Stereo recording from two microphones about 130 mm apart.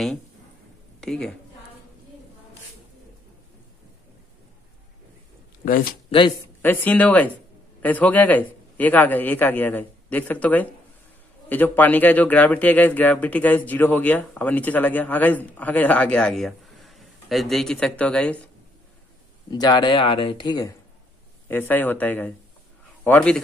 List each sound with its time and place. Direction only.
1.0 s a woman's voice: 5° left (ahead or behind)
6.1 s speech: 45° left (ahead or behind)
6.6 s a man's voice: 15° left (ahead or behind)
19.5 s speech: 30° left (ahead or behind)
21.5 s a man's voice: 15° left (ahead or behind)